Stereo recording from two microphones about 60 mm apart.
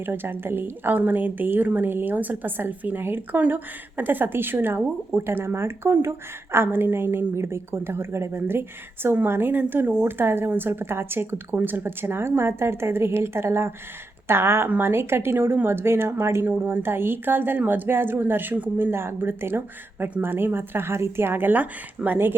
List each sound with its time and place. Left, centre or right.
0.0 s a woman's voice: right